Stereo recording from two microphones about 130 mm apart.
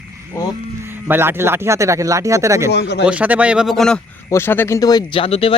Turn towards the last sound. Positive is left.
turn(degrees=45)  # may be behind; listen again after turning